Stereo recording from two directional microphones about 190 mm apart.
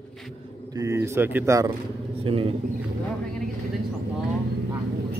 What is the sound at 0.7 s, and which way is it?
Speech, 15° right (ahead or behind).